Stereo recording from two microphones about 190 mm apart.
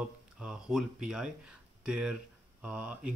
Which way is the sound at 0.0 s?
5° right (ahead or behind).